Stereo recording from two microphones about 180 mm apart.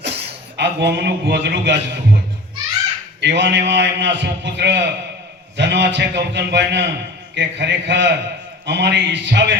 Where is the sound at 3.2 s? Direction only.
75° right (ahead or behind).